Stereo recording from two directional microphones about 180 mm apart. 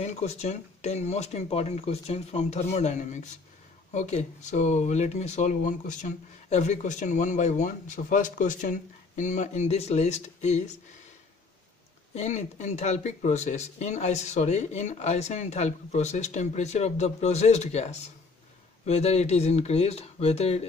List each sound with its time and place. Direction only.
0.0 s speech: 40° left (ahead or behind)
12.1 s speech: 40° left (ahead or behind)